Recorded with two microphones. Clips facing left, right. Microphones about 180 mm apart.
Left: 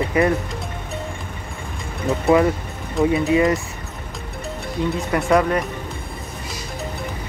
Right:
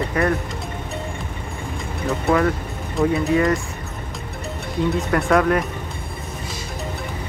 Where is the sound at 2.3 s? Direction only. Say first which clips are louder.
Left 3 dB; centre (ahead or behind).